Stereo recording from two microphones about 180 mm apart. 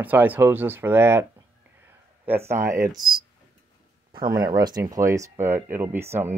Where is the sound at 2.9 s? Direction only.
25° right (ahead or behind).